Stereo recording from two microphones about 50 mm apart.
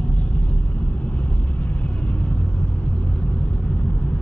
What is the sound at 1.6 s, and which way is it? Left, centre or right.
Vehicle, left.